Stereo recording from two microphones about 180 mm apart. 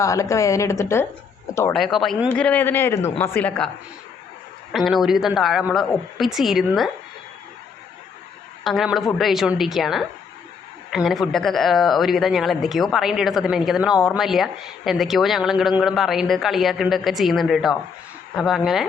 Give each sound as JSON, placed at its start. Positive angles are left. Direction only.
{"t": 0.0, "sound": "speech", "side_deg": 15}
{"t": 1.7, "sound": "speech", "side_deg": 0}
{"t": 2.3, "sound": "speech", "side_deg": 10}
{"t": 4.7, "sound": "speech", "side_deg": 0}
{"t": 8.6, "sound": "speech", "side_deg": 0}